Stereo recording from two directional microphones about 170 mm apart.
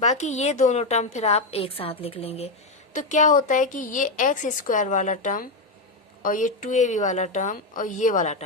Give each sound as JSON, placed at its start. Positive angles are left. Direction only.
{"t": 0.0, "sound": "a woman's voice", "side_deg": 45}